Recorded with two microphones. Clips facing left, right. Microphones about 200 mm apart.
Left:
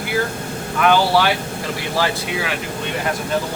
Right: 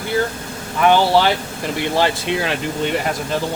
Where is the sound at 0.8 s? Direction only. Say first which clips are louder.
Right 2 dB; 20° right (ahead or behind).